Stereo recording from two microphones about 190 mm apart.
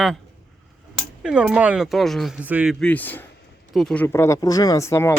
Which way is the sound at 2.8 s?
10° left (ahead or behind).